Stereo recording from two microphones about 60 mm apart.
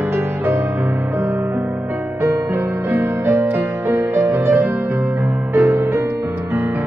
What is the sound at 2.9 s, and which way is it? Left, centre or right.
Music, right.